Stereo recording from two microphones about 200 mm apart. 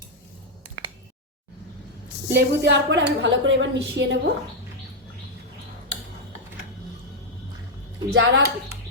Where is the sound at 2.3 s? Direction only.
60° right (ahead or behind).